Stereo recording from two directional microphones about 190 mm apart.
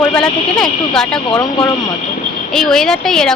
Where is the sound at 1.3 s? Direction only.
20° left (ahead or behind).